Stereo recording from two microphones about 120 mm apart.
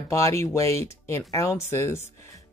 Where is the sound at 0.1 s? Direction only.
25° left (ahead or behind).